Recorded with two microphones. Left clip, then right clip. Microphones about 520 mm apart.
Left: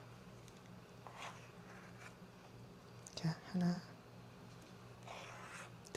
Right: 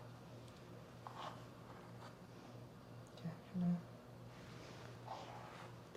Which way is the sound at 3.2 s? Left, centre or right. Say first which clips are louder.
Left 9 dB; left.